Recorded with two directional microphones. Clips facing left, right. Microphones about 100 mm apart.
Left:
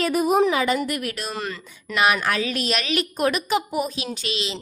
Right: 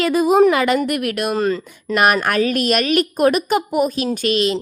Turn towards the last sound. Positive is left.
turn(degrees=-50)  # may be behind; listen again after turning